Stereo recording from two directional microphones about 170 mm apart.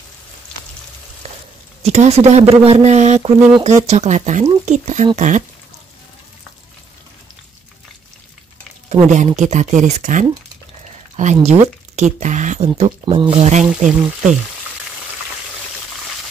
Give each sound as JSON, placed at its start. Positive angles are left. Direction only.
{"t": 1.2, "sound": "a sound", "side_deg": -40}
{"t": 1.8, "sound": "speech", "side_deg": -40}
{"t": 8.8, "sound": "speech", "side_deg": -40}